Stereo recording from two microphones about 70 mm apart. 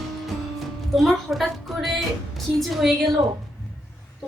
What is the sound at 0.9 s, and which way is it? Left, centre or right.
A woman's voice, centre.